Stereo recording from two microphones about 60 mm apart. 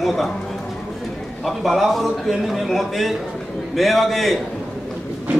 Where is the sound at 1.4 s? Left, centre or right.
Centre.